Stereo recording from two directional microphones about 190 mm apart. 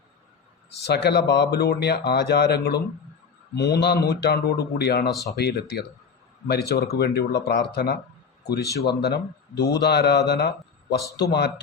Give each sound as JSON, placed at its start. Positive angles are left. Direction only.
{"t": 0.8, "sound": "speech", "side_deg": 60}